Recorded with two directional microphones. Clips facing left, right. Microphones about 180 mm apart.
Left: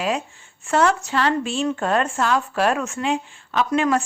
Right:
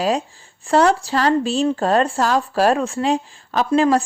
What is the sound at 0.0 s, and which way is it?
Speech, 35° right (ahead or behind).